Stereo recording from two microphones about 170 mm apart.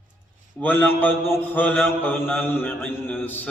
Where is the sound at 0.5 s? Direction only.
10° left (ahead or behind).